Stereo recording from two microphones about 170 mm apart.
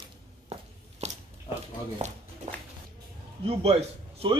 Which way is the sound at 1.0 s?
40° right (ahead or behind).